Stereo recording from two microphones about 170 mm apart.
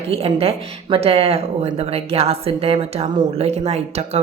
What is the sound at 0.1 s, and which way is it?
A woman's voice, 35° right (ahead or behind).